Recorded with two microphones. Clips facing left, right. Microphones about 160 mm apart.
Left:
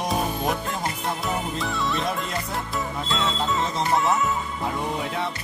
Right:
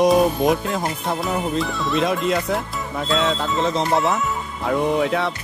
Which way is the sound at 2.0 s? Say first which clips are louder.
Right 8 dB; 90° right.